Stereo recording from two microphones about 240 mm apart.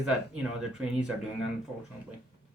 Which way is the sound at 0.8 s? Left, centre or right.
Centre.